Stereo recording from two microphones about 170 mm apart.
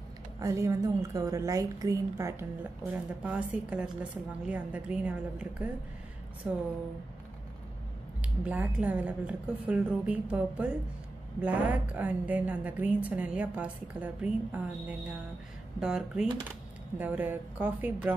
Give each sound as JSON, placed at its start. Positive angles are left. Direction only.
{"t": 0.4, "sound": "a woman's voice", "side_deg": -20}
{"t": 8.2, "sound": "a woman's voice", "side_deg": -10}